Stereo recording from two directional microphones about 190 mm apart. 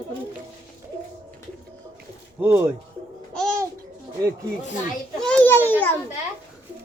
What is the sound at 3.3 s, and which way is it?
Babbling, centre (ahead or behind).